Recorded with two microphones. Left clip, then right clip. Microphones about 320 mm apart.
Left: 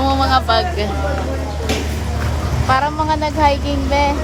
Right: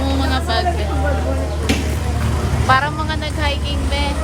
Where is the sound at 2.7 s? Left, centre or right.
Centre.